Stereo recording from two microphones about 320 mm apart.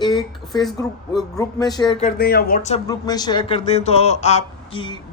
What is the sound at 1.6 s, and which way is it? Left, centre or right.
Speech, centre.